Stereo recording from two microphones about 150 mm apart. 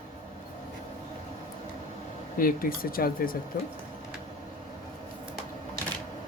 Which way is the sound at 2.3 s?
70° left (ahead or behind).